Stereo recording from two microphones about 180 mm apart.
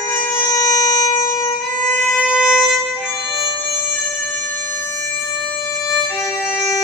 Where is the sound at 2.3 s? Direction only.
5° right (ahead or behind).